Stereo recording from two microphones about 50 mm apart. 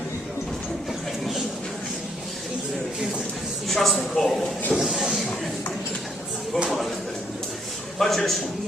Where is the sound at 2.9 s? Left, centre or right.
Centre.